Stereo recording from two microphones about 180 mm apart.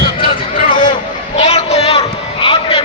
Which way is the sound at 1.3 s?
35° left (ahead or behind).